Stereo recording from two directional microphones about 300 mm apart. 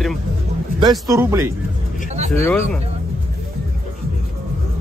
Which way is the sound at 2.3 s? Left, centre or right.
Centre.